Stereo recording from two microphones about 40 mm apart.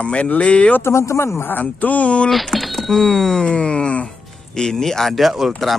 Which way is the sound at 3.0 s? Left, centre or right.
Centre.